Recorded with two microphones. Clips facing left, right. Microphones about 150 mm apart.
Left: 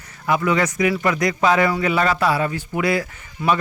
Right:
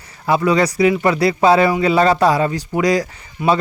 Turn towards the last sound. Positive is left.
turn(degrees=-20)  # may be behind; listen again after turning